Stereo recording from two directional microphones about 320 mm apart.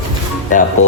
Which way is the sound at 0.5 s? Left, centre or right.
Left.